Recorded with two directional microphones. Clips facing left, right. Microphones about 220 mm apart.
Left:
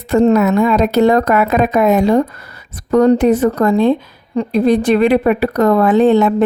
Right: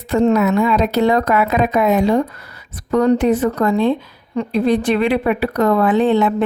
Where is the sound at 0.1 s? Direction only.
45° left (ahead or behind).